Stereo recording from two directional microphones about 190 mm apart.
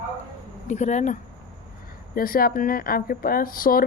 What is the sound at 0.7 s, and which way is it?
A woman's voice, 35° left (ahead or behind).